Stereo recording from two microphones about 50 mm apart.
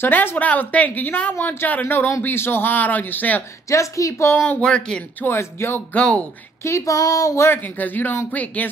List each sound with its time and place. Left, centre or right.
0.0 s a woman's voice: left
0.4 s a woman's voice: left
3.6 s a woman's voice: left
4.6 s speech: centre
5.4 s speech: left
5.9 s speech: left
6.6 s a sound: left
7.5 s speech: left